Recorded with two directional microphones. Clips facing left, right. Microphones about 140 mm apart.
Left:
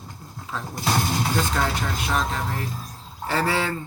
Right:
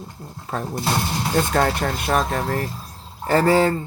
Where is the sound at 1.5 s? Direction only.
50° right (ahead or behind).